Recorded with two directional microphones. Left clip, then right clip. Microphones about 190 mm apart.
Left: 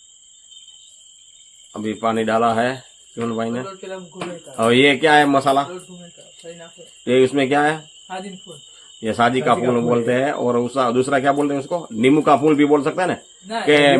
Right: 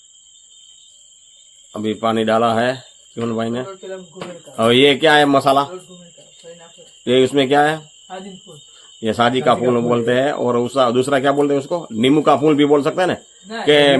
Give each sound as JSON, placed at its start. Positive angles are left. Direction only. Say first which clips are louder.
{"t": 1.7, "sound": "a man's voice", "louder": "right 2 dB", "side_deg": -35}
{"t": 7.0, "sound": "a man's voice", "louder": "right 1 dB", "side_deg": -35}
{"t": 9.0, "sound": "a man's voice", "louder": "right 1 dB", "side_deg": -35}